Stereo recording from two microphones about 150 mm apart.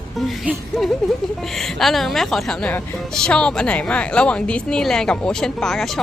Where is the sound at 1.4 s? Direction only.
Centre (ahead or behind).